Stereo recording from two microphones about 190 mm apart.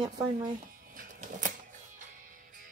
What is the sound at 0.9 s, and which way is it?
Music, 45° right (ahead or behind).